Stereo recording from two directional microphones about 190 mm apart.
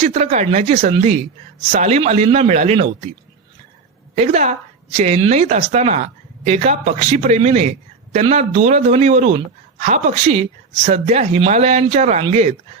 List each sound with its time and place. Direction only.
0.0 s speech: 35° right (ahead or behind)
4.1 s speech: 35° right (ahead or behind)